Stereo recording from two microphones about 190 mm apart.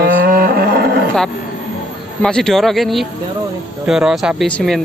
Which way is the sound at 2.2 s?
5° left (ahead or behind).